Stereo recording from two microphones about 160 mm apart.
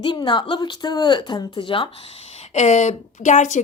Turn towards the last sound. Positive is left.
turn(degrees=50)  # may be behind; listen again after turning